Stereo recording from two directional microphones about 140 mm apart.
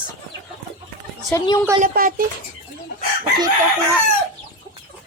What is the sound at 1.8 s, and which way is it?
Speech, 90° right.